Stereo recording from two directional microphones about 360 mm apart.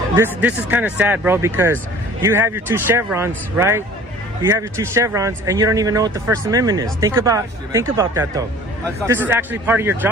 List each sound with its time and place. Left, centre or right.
0.2 s speech: centre